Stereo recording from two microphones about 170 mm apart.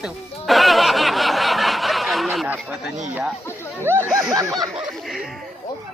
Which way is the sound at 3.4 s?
15° left (ahead or behind).